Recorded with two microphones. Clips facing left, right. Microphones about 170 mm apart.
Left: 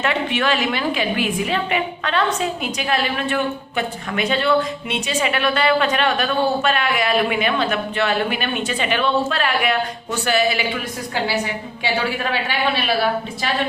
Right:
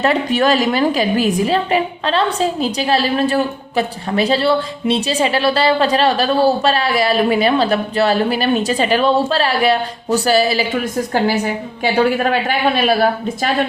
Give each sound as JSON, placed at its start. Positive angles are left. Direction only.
{"t": 0.0, "sound": "a woman's voice", "side_deg": -35}